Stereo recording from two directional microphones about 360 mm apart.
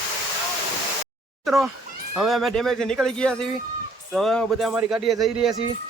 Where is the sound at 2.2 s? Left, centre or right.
Centre.